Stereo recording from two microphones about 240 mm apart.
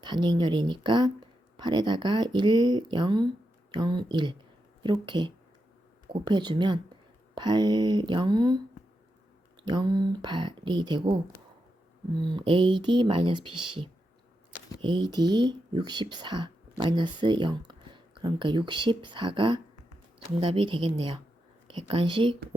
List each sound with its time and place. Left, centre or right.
0.0 s speech: centre
9.6 s speech: centre
12.2 s speech: centre
14.8 s speech: centre